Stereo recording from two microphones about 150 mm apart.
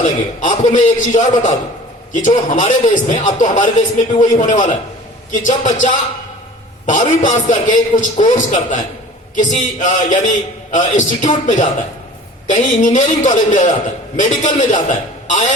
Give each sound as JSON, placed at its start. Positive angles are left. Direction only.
{"t": 0.0, "sound": "a man's voice", "side_deg": 55}